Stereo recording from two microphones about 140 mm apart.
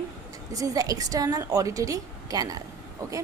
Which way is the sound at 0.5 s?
25° right (ahead or behind).